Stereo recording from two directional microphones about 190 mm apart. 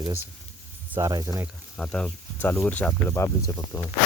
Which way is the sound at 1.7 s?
5° left (ahead or behind).